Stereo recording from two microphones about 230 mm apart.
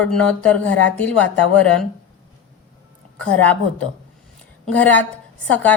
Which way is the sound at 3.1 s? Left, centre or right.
Centre.